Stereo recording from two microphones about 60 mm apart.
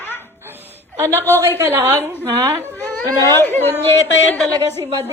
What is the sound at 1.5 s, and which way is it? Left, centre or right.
Speech, right.